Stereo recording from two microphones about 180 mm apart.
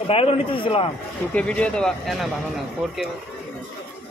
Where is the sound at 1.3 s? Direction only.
5° left (ahead or behind).